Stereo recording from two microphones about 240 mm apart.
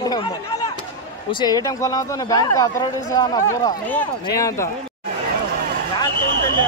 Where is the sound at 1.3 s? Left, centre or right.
Centre.